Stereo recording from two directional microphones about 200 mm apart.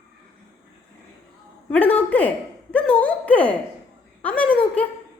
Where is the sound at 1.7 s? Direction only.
5° left (ahead or behind).